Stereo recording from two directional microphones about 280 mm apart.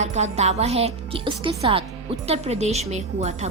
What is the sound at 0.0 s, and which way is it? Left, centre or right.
A woman's voice, right.